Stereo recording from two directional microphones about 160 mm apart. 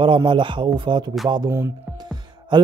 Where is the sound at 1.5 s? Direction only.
15° right (ahead or behind).